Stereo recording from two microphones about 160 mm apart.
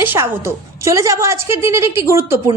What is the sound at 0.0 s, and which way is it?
A woman's voice, 15° right (ahead or behind).